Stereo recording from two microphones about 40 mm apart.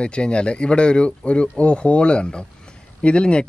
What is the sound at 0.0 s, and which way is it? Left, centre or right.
Speech, left.